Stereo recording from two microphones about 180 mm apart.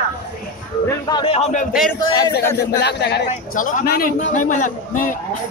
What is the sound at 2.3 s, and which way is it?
Speech, 65° left (ahead or behind).